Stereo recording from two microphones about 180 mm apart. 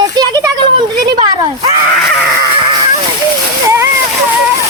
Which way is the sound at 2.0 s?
5° left (ahead or behind).